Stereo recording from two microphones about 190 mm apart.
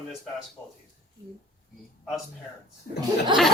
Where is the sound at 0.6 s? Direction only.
20° left (ahead or behind).